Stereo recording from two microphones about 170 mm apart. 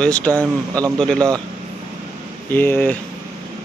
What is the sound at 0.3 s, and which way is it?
Speech, 20° right (ahead or behind).